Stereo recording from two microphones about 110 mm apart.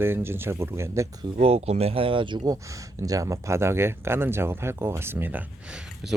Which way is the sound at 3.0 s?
30° right (ahead or behind).